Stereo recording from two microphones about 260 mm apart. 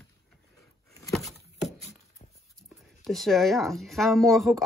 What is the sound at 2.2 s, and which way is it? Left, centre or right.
Dog, left.